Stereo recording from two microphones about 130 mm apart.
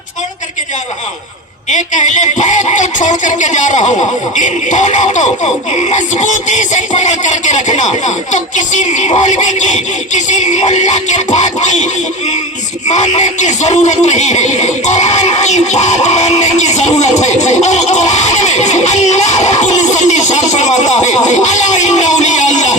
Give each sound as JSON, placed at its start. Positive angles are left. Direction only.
{"t": 1.7, "sound": "speech", "side_deg": 70}
{"t": 12.9, "sound": "speech", "side_deg": 65}